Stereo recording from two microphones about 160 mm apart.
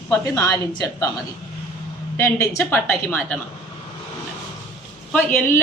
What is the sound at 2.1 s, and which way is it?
A woman's voice, 15° left (ahead or behind).